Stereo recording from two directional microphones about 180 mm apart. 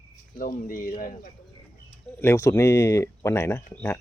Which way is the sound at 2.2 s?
15° left (ahead or behind).